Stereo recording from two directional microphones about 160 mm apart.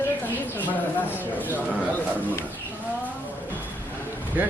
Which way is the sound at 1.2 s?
10° left (ahead or behind).